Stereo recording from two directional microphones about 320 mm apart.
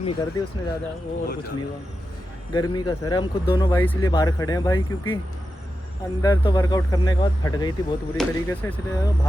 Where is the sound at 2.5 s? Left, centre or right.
Centre.